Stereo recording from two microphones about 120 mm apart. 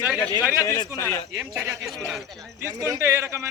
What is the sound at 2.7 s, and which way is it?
Speech, 30° right (ahead or behind).